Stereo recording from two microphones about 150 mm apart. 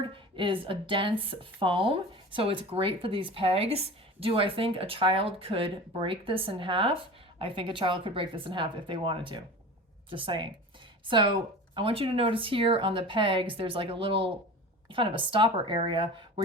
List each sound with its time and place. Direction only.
0.1 s a woman's voice: 35° right (ahead or behind)